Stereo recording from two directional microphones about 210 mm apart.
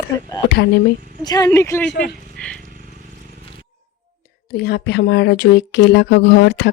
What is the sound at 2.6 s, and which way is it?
Bicycle, 40° right (ahead or behind).